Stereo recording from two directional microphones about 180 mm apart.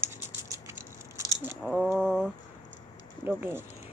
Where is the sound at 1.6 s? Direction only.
Centre (ahead or behind).